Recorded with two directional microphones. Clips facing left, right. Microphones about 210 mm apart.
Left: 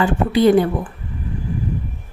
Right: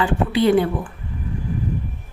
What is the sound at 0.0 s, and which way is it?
Speech, 45° left (ahead or behind).